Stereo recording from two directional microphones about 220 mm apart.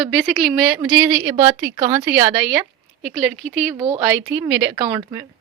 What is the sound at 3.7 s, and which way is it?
Speech, 15° right (ahead or behind).